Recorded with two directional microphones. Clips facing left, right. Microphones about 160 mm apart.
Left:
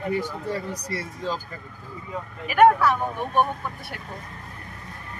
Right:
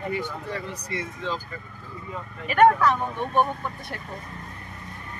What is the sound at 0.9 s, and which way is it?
Speech, 40° left (ahead or behind).